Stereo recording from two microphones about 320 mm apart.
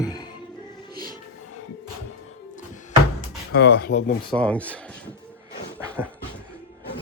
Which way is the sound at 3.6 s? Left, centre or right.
Left.